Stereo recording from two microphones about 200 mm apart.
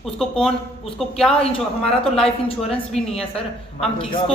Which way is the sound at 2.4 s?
30° left (ahead or behind).